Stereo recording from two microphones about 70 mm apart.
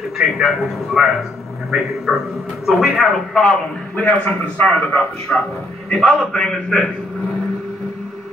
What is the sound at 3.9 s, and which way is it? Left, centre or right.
A man's voice, left.